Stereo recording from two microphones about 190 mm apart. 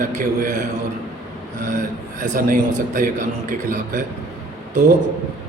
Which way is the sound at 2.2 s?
45° right (ahead or behind).